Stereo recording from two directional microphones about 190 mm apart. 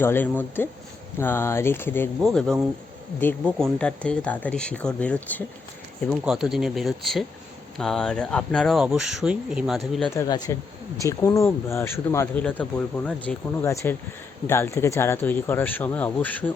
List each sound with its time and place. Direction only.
0.0 s speech: 10° left (ahead or behind)
10.2 s speech: 20° left (ahead or behind)